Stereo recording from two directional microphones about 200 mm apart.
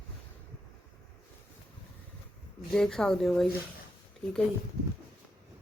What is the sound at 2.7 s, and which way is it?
Speech, centre (ahead or behind).